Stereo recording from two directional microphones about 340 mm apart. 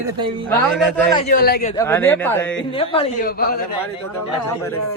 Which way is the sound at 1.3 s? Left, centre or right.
Left.